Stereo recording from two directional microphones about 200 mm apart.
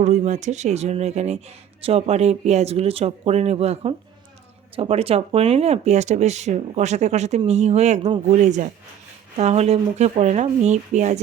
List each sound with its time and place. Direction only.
0.0 s speech: 35° right (ahead or behind)